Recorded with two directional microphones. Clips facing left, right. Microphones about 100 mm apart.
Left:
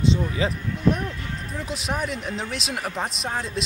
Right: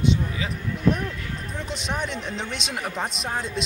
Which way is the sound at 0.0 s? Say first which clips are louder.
Left 2 dB; 30° left (ahead or behind).